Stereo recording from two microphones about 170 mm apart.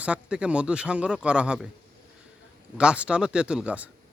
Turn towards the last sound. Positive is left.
turn(degrees=-5)  # may be behind; listen again after turning